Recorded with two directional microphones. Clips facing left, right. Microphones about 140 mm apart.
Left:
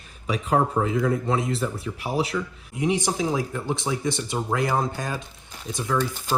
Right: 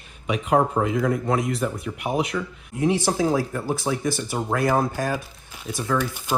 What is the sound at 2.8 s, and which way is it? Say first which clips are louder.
Speech: right 3 dB; 20° left (ahead or behind).